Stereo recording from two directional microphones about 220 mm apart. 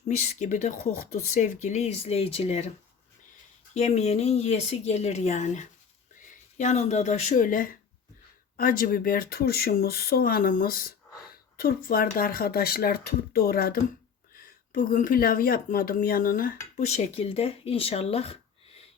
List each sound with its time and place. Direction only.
0.0 s speech: 35° left (ahead or behind)
3.8 s speech: 30° left (ahead or behind)